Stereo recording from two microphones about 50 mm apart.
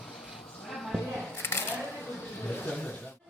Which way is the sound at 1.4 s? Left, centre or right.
Left.